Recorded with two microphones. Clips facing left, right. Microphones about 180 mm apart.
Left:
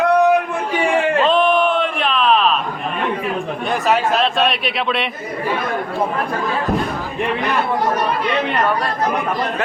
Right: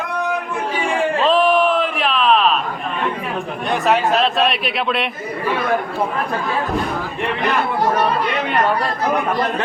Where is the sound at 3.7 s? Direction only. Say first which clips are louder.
Right 1 dB; centre (ahead or behind).